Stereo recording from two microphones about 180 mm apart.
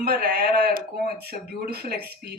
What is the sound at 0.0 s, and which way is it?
A man's voice, 60° right (ahead or behind).